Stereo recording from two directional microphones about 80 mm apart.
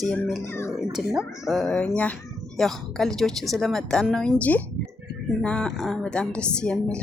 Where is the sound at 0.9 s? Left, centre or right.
Centre.